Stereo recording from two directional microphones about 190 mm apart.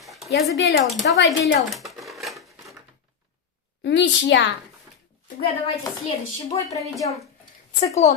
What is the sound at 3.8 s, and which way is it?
Speech, 65° left (ahead or behind).